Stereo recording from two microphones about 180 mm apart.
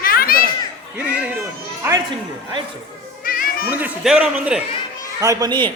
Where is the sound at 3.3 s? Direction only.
50° left (ahead or behind).